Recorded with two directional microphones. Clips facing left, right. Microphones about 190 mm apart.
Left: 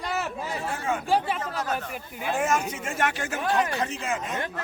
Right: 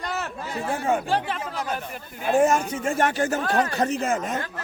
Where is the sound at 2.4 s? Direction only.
35° right (ahead or behind).